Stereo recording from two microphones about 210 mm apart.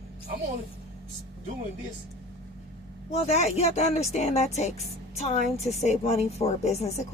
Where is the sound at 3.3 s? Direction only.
30° left (ahead or behind).